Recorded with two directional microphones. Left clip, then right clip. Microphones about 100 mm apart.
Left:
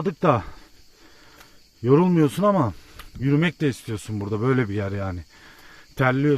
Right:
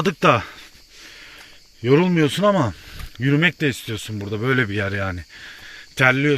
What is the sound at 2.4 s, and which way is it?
Speech, 20° left (ahead or behind).